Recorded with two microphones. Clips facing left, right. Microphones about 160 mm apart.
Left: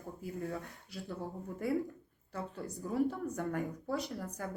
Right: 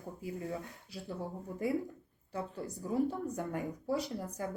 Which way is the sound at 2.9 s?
15° right (ahead or behind).